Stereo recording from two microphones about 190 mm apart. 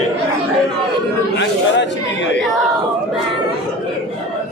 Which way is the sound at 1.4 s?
65° left (ahead or behind).